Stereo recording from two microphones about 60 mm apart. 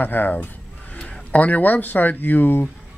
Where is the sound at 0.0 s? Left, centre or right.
Left.